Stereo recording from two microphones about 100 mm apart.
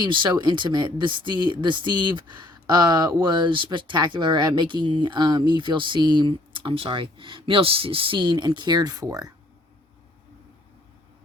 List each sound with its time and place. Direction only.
0.0 s speech: 50° right (ahead or behind)